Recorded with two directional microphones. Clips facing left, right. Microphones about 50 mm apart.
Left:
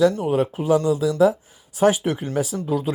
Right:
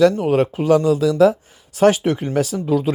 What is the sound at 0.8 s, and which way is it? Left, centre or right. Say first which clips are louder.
Speech: right 4 dB; right.